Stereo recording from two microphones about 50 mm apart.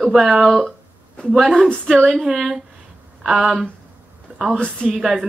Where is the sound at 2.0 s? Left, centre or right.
Centre.